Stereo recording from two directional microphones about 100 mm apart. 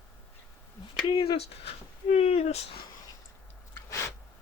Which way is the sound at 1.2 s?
90° left.